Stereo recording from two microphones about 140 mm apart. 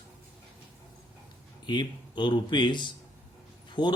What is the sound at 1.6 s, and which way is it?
Speech, 30° left (ahead or behind).